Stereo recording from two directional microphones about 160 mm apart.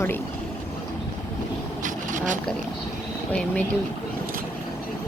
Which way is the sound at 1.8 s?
55° right (ahead or behind).